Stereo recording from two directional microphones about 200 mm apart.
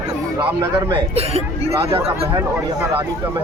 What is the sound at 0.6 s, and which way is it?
Speech, 20° right (ahead or behind).